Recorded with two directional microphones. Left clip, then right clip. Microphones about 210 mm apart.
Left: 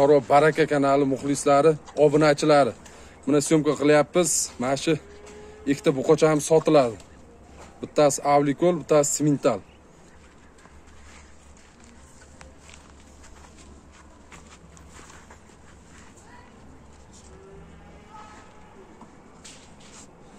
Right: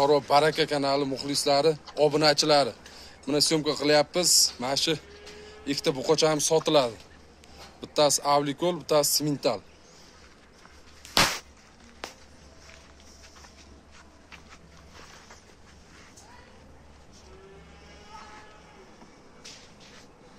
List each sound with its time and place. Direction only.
0.0 s speech: 40° left (ahead or behind)